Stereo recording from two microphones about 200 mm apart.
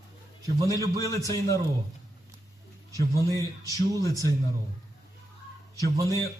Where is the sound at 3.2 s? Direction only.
15° right (ahead or behind).